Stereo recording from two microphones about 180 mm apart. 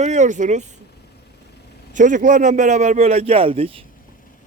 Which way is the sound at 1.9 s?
45° right (ahead or behind).